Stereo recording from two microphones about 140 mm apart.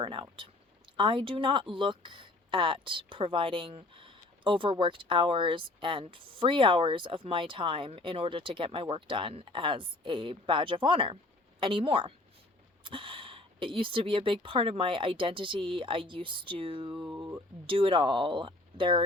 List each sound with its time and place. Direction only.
0.0 s speech: 35° right (ahead or behind)
17.2 s speech: 25° right (ahead or behind)
17.7 s speech: 40° right (ahead or behind)